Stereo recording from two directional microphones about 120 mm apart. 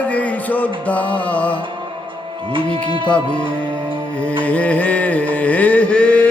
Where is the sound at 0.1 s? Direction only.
10° left (ahead or behind).